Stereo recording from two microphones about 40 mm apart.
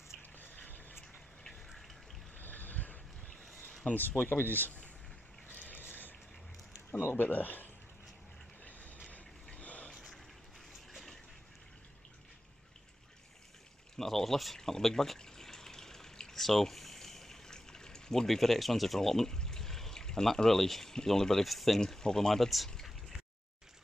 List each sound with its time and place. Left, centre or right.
0.4 s a sound: left
2.3 s a sound: left
4.1 s speech: left
5.5 s a sound: left
6.9 s speech: left
9.6 s boat: left
13.9 s speech: centre
15.1 s water: centre
18.2 s speech: centre
21.8 s speech: centre